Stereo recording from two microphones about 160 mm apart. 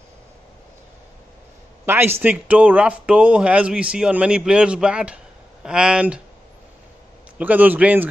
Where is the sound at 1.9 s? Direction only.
15° right (ahead or behind).